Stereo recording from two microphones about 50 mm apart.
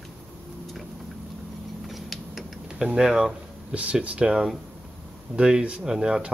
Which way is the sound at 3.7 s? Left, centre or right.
Right.